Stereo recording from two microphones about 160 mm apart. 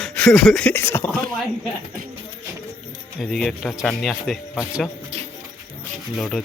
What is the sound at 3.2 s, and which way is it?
A man's voice, centre (ahead or behind).